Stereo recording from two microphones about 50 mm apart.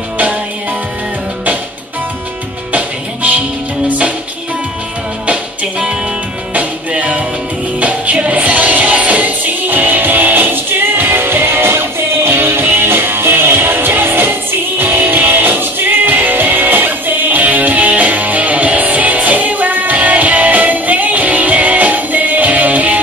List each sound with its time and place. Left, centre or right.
2.7 s music: right
5.2 s music: right